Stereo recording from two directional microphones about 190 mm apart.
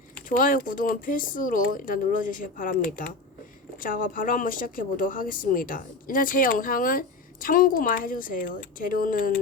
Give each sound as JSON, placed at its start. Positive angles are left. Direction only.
{"t": 0.3, "sound": "speech", "side_deg": 45}